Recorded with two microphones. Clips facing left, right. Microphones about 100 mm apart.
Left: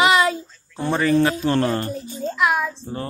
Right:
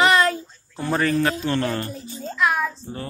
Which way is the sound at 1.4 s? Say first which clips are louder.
Left 4 dB; 30° left (ahead or behind).